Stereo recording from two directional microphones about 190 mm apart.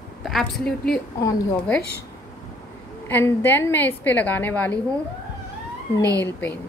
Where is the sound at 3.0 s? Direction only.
10° left (ahead or behind).